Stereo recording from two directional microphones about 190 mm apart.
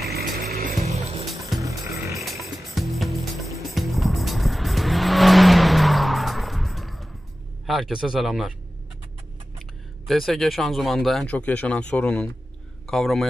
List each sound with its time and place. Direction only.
0.1 s music: 55° right (ahead or behind)
0.8 s music: 35° right (ahead or behind)
1.2 s music: centre (ahead or behind)
1.6 s music: 15° right (ahead or behind)
2.1 s music: centre (ahead or behind)
3.7 s vehicle: centre (ahead or behind)
7.6 s speech: centre (ahead or behind)
9.6 s speech: centre (ahead or behind)